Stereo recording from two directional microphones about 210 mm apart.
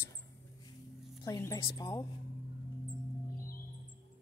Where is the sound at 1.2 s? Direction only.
15° left (ahead or behind).